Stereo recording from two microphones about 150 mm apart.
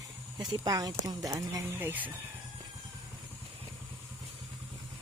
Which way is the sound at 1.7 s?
10° right (ahead or behind).